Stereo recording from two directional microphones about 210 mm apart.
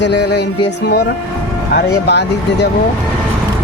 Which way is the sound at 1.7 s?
50° left (ahead or behind).